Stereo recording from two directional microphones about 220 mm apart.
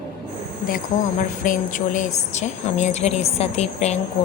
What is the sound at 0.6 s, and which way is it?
Speech, 35° left (ahead or behind).